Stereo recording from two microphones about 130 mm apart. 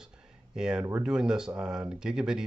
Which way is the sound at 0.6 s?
5° right (ahead or behind).